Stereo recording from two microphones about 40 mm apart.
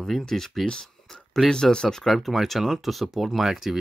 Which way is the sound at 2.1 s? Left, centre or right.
Centre.